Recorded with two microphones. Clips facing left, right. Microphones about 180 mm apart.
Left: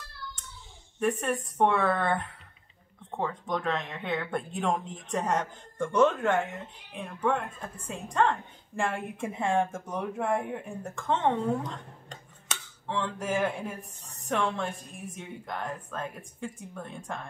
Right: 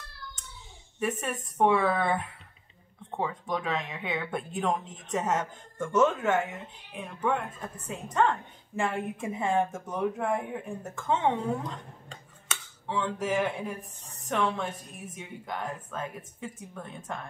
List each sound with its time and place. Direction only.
0.9 s speech: 5° right (ahead or behind)